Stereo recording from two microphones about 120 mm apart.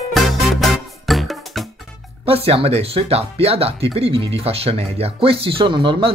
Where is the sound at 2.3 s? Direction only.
55° right (ahead or behind).